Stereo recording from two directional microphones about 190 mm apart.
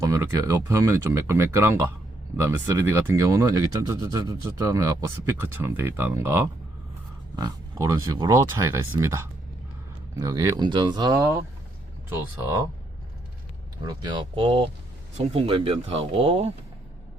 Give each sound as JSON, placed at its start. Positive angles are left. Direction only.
{"t": 0.0, "sound": "speech", "side_deg": -15}
{"t": 13.8, "sound": "speech", "side_deg": -20}